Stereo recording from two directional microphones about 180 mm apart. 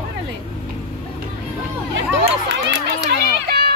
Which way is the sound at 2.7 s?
70° right (ahead or behind).